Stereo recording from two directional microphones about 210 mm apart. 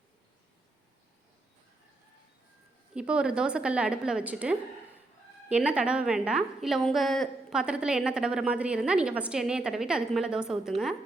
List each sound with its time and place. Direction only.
2.9 s a woman's voice: 5° right (ahead or behind)